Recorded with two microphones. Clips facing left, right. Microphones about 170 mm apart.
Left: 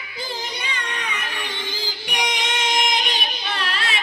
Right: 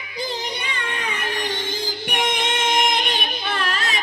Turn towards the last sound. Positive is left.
turn(degrees=-45)  # may be behind; listen again after turning